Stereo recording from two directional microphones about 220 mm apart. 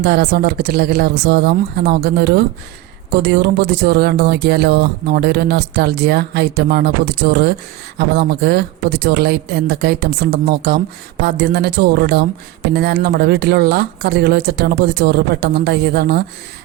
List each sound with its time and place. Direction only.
0.0 s speech: 45° right (ahead or behind)